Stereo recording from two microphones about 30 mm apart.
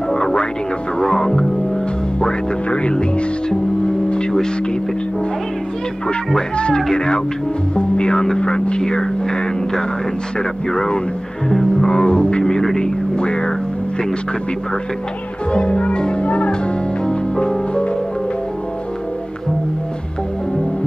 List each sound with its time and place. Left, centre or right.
0.1 s music: left
2.7 s speech: left
6.5 s speech: left
11.4 s music: left
12.7 s speech: left
15.5 s speech: left
17.0 s music: left